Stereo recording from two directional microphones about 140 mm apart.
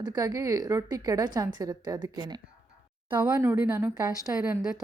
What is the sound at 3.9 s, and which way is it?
Speech, 30° right (ahead or behind).